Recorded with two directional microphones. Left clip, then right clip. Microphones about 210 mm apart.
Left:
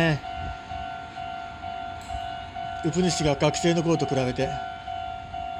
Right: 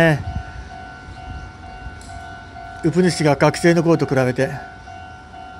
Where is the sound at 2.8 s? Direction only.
20° right (ahead or behind).